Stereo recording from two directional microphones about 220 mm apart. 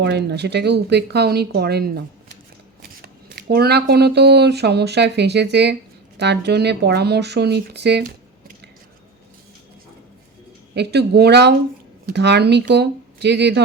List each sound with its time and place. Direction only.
0.0 s speech: 50° right (ahead or behind)
10.8 s speech: 50° right (ahead or behind)